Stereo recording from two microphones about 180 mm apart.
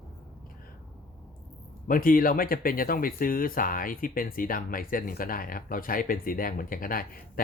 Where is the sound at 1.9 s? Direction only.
50° left (ahead or behind).